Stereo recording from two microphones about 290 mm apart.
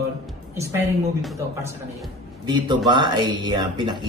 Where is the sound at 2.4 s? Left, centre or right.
Centre.